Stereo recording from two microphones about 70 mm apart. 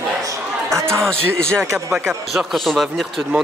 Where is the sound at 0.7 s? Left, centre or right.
Right.